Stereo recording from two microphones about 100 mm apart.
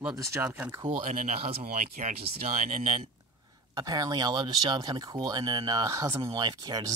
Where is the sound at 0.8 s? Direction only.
80° right.